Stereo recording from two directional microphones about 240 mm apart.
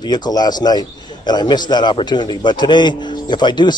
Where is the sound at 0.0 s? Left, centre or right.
Centre.